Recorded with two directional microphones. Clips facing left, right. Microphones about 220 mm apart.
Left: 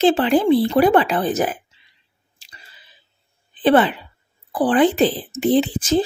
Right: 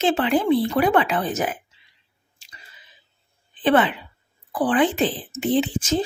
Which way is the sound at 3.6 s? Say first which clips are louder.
Left 3 dB; 35° left (ahead or behind).